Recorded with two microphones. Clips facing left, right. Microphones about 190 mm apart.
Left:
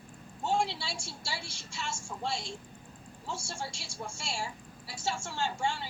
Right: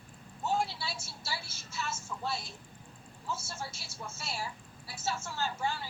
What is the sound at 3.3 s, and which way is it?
Speech, 5° right (ahead or behind).